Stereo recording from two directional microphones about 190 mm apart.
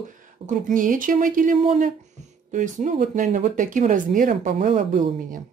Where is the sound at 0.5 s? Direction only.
45° right (ahead or behind).